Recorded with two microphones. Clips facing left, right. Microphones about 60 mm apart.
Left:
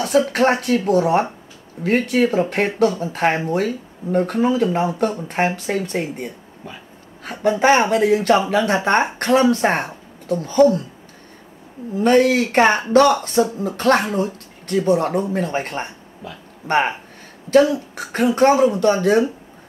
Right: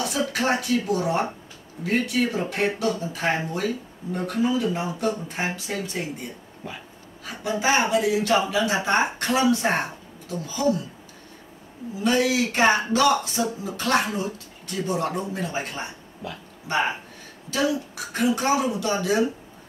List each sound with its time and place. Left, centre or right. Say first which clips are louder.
0.0 s speech: left 8 dB; left
11.9 s speech: left 7 dB; left